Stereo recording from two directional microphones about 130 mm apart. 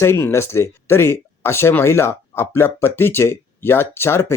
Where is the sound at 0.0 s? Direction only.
20° left (ahead or behind).